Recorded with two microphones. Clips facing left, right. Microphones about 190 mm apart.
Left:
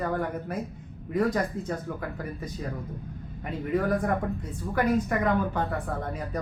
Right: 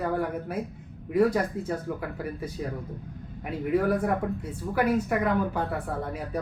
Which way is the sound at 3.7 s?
10° right (ahead or behind).